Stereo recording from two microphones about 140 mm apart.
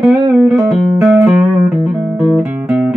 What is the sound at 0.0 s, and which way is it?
Music, 5° right (ahead or behind).